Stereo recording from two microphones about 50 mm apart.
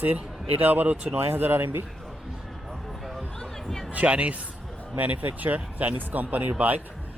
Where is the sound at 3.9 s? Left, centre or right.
Right.